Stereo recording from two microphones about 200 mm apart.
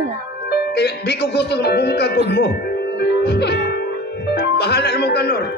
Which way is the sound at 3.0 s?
55° left (ahead or behind).